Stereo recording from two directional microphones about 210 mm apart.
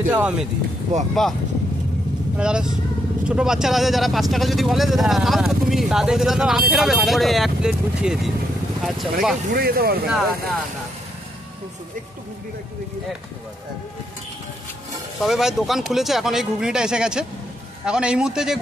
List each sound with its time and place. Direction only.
0.1 s speech: 5° right (ahead or behind)
0.9 s speech: 35° right (ahead or behind)
2.3 s speech: 5° right (ahead or behind)
9.5 s speech: 45° right (ahead or behind)
10.0 s speech: centre (ahead or behind)
15.1 s speech: centre (ahead or behind)